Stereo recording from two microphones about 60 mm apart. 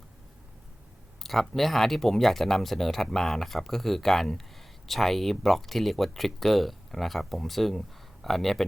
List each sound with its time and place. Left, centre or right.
1.2 s speech: centre